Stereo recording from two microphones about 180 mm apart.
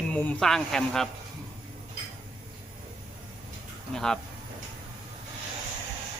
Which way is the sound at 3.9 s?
5° left (ahead or behind).